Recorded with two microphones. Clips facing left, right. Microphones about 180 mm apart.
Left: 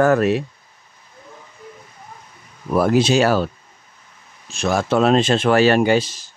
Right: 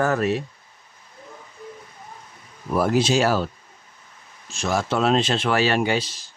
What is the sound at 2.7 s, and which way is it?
Speech, 65° left (ahead or behind).